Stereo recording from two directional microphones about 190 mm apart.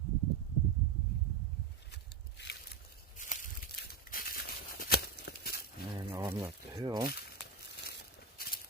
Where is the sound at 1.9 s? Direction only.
60° left (ahead or behind).